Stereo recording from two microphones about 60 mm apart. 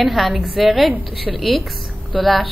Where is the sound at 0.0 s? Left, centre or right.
Centre.